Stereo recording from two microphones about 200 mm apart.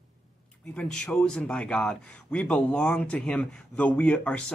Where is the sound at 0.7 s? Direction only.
5° left (ahead or behind).